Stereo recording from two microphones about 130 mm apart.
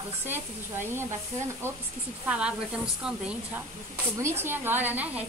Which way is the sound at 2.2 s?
10° right (ahead or behind).